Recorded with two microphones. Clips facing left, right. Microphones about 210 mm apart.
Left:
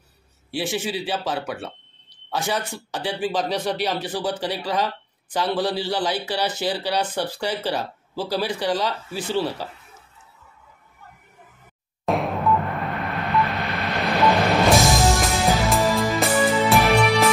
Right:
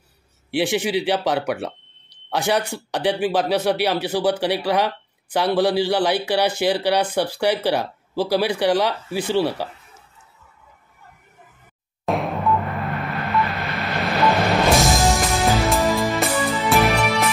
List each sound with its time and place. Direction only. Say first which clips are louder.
0.5 s speech: right 5 dB; 15° right (ahead or behind)
1.0 s speech: right 6 dB; 75° right (ahead or behind)
1.3 s speech: right 5 dB; 15° right (ahead or behind)
12.1 s music: even; centre (ahead or behind)